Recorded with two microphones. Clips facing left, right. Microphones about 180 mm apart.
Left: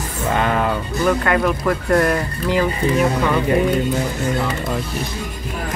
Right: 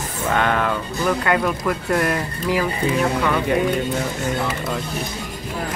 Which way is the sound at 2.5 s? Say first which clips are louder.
Left 3 dB; 5° right (ahead or behind).